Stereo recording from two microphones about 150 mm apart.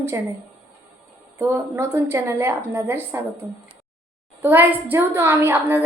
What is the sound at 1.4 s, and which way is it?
A woman's voice, 15° right (ahead or behind).